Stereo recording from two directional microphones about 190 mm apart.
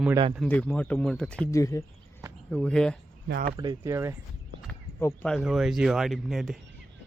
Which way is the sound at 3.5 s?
20° right (ahead or behind).